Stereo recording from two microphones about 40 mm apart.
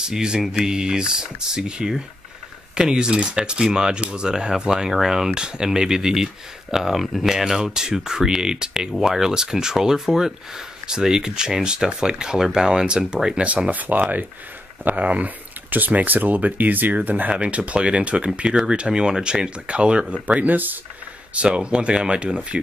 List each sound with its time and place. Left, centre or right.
0.0 s speech: centre
7.0 s speech: centre
7.2 s speech: centre
13.4 s speech: right
13.7 s speech: right
17.3 s speech: right
20.4 s speech: right
21.4 s speech: right